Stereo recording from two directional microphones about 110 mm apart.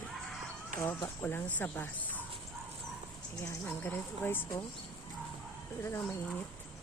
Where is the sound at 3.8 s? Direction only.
20° left (ahead or behind).